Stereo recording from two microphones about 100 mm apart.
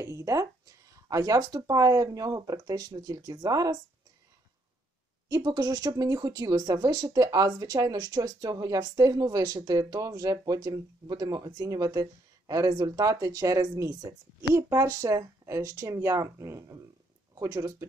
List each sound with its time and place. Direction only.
0.0 s a sound: 35° right (ahead or behind)
1.0 s speech: 35° right (ahead or behind)
5.3 s speech: 40° right (ahead or behind)